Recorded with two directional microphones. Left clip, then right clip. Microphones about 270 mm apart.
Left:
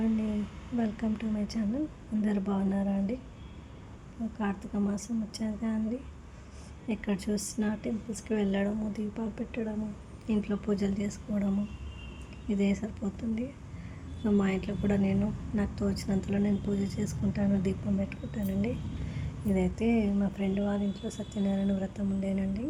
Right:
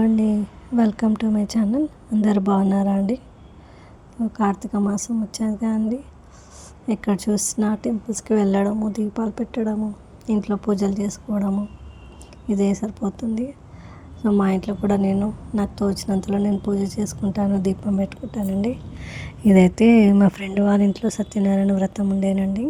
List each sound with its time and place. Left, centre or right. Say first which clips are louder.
0.8 s a woman's voice: right 12 dB; right
4.4 s a woman's voice: right 12 dB; right